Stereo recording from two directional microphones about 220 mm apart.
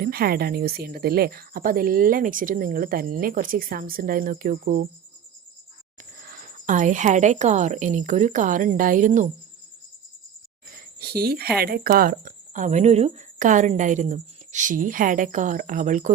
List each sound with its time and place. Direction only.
0.0 s a woman's voice: 45° right (ahead or behind)
6.2 s a woman's voice: 40° right (ahead or behind)
10.7 s a sound: 45° right (ahead or behind)
11.5 s a woman's voice: 45° right (ahead or behind)